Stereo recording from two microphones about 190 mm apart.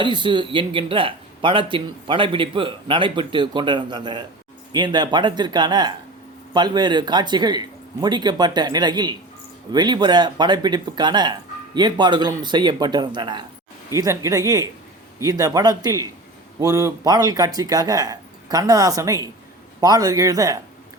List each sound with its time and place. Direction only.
0.0 s a man's voice: 25° right (ahead or behind)